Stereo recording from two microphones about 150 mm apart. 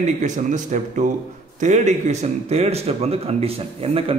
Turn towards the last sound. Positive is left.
turn(degrees=-40)  # may be behind; listen again after turning